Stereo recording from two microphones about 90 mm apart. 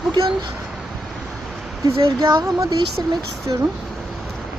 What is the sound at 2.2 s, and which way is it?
Speech, 50° right (ahead or behind).